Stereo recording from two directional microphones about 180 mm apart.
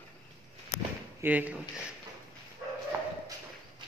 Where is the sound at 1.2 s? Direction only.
10° right (ahead or behind).